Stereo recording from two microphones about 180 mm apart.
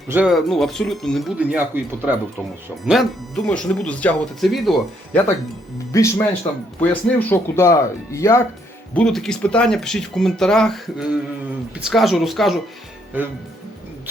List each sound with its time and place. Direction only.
0.1 s speech: 5° right (ahead or behind)
5.9 s speech: 15° left (ahead or behind)
9.0 s speech: 5° left (ahead or behind)